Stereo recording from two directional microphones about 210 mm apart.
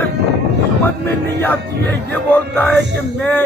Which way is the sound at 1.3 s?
10° left (ahead or behind).